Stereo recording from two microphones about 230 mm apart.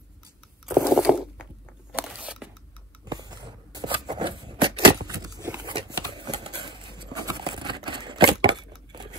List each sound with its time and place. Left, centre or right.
0.9 s crunch: centre
2.0 s tearing: centre
3.1 s a sound: centre